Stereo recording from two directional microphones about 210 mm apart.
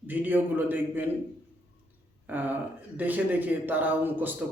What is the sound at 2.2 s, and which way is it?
A man's voice, 10° right (ahead or behind).